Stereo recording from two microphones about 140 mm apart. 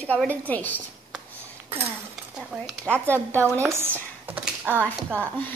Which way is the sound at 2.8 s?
15° right (ahead or behind).